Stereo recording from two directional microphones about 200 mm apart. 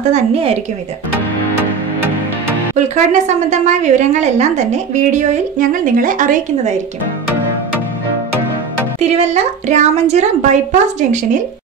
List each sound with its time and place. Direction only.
0.1 s a woman's voice: 30° right (ahead or behind)
3.1 s a woman's voice: 35° right (ahead or behind)
9.0 s a woman's voice: 35° right (ahead or behind)